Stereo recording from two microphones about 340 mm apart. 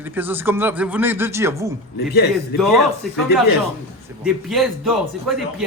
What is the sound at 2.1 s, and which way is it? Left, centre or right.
Speech, left.